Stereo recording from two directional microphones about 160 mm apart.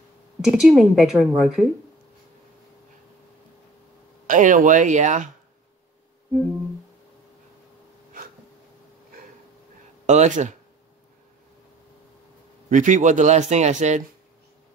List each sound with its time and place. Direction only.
0.4 s a woman's voice: 5° right (ahead or behind)
4.3 s speech: 55° right (ahead or behind)
10.0 s speech: 45° right (ahead or behind)
12.6 s speech: 50° right (ahead or behind)